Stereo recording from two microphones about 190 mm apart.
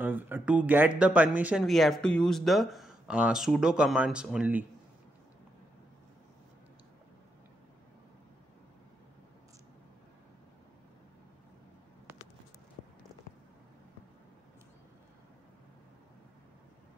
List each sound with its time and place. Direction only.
0.0 s speech: 10° right (ahead or behind)